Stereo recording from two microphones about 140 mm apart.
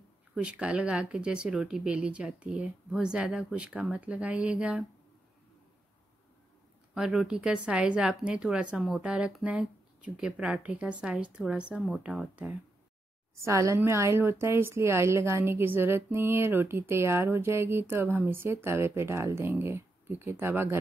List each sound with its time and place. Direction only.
0.3 s a woman's voice: 5° right (ahead or behind)
6.9 s a woman's voice: 5° right (ahead or behind)
13.4 s a woman's voice: 20° right (ahead or behind)